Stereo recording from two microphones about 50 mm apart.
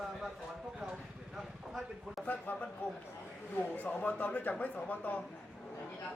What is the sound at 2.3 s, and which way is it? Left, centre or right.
Speech, left.